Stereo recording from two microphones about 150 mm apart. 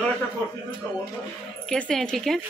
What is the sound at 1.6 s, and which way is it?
Speech, 5° left (ahead or behind).